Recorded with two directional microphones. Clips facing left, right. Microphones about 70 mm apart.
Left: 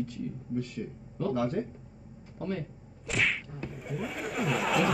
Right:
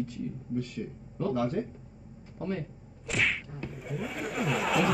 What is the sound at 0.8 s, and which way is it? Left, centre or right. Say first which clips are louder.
Speech: even; centre.